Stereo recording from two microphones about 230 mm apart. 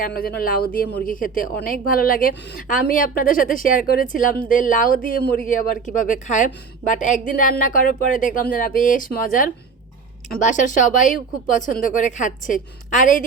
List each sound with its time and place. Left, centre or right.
0.0 s a woman's voice: left